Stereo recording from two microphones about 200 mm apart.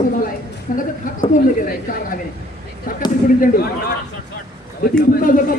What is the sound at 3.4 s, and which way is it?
Speech, 50° left (ahead or behind).